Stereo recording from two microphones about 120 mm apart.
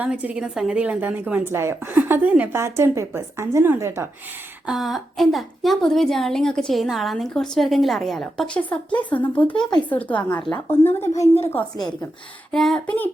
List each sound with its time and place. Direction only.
0.0 s a woman's voice: 10° right (ahead or behind)
4.6 s a woman's voice: centre (ahead or behind); by 11.1 s 20° left (ahead or behind)
12.5 s a woman's voice: 5° left (ahead or behind)